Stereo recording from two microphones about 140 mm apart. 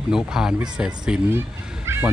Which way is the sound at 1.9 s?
20° right (ahead or behind).